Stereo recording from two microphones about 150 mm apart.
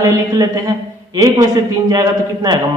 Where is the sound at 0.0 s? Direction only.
25° right (ahead or behind).